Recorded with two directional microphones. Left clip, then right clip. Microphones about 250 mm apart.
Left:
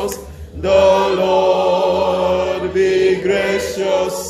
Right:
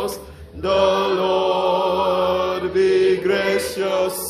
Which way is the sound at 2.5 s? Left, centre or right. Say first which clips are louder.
Left 2 dB; centre.